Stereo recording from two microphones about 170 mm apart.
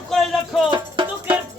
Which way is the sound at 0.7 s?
30° right (ahead or behind).